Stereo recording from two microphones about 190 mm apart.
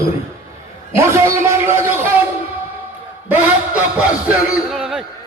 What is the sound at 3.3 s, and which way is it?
A man's voice, 10° right (ahead or behind).